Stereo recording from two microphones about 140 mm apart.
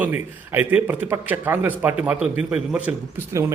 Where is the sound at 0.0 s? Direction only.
15° right (ahead or behind).